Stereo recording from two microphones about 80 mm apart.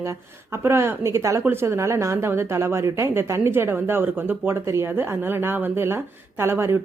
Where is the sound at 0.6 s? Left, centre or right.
Right.